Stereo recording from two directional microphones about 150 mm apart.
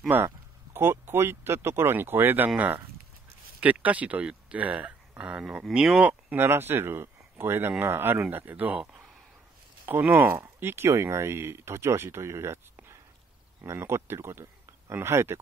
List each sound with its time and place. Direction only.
0.1 s speech: 10° right (ahead or behind)